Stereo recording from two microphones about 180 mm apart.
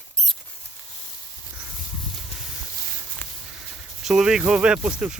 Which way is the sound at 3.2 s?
10° left (ahead or behind).